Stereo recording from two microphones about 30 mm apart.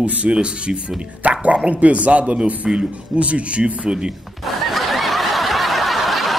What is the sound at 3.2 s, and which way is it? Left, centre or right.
Speech, right.